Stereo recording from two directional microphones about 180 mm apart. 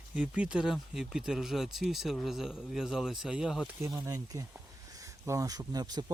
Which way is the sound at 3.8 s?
20° right (ahead or behind).